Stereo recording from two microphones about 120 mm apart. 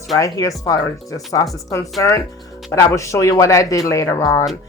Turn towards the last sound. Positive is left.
turn(degrees=25)  # may be behind; listen again after turning